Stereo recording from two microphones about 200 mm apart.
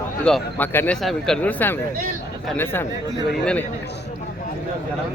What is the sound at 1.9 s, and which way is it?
Speech, 45° right (ahead or behind).